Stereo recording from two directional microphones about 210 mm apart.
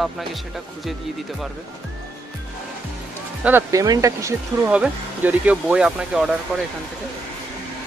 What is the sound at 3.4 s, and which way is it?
Speech, 10° right (ahead or behind).